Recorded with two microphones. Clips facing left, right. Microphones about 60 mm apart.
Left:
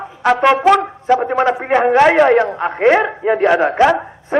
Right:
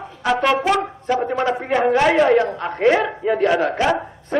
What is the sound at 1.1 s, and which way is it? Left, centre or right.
A man's voice, left.